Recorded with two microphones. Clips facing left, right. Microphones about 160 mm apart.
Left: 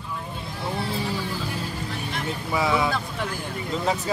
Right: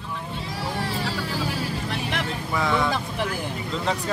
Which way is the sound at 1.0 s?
80° right.